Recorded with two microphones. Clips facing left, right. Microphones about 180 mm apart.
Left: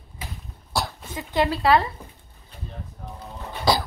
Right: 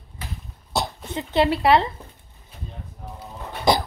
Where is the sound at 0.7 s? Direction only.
20° right (ahead or behind).